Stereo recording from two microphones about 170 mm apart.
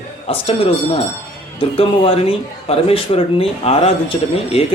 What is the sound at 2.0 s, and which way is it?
Speech, 35° left (ahead or behind).